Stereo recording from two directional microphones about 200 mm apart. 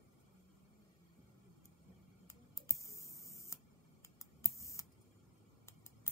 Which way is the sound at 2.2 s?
15° left (ahead or behind).